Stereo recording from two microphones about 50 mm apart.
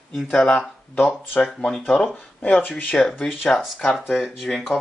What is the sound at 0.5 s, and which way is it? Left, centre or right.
Speech, left.